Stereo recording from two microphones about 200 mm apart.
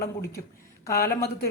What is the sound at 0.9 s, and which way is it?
Speech, 50° left (ahead or behind).